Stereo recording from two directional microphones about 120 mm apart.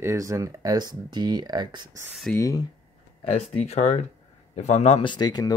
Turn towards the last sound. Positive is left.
turn(degrees=35)  # may be behind; listen again after turning